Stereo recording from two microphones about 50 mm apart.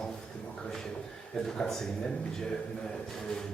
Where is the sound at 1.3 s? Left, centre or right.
Centre.